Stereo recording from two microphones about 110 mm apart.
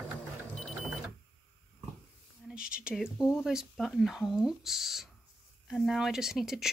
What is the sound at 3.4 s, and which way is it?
Speech, 5° right (ahead or behind).